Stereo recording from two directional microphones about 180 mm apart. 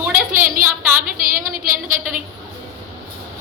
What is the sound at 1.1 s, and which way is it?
Speech, 50° right (ahead or behind).